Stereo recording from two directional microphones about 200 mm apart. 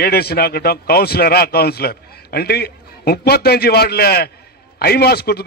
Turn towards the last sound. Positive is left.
turn(degrees=50)  # may be behind; listen again after turning